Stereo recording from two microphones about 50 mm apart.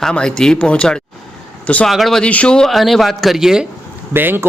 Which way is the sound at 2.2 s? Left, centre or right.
Left.